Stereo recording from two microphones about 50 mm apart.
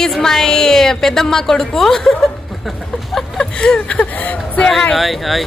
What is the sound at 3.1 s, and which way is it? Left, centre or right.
Speech, centre.